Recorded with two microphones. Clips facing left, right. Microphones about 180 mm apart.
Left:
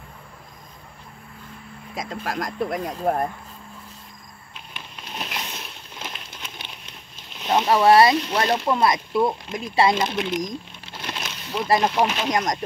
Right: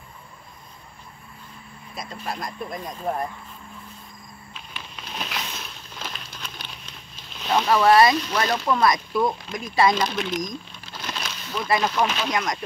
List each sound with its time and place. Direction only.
2.0 s speech: 90° left; by 3.0 s 70° left (ahead or behind)
4.7 s a sound: 15° left (ahead or behind)
7.3 s speech: 20° left (ahead or behind)
10.9 s a sound: 25° left (ahead or behind)
11.8 s speech: 20° left (ahead or behind)
12.3 s speech: 40° left (ahead or behind)